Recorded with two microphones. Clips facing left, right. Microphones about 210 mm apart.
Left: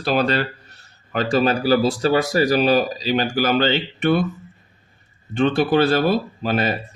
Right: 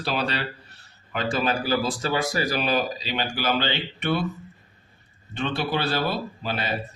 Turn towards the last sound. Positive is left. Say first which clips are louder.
# left 8 dB
turn(degrees=50)  # may be behind; listen again after turning